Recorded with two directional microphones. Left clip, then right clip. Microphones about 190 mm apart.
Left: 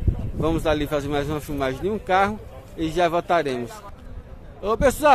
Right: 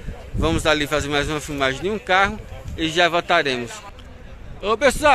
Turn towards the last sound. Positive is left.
turn(degrees=10)  # may be behind; listen again after turning